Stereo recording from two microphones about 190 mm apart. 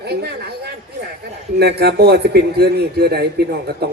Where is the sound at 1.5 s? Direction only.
60° right (ahead or behind).